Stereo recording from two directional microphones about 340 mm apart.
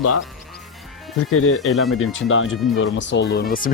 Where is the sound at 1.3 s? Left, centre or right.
Left.